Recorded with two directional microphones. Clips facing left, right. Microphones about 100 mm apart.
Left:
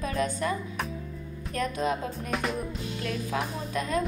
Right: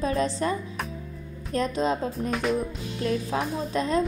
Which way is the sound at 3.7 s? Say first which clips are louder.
Right 4 dB; 30° right (ahead or behind).